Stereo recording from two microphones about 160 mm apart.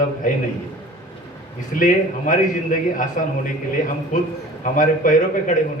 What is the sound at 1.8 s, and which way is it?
A man's voice, 55° left (ahead or behind).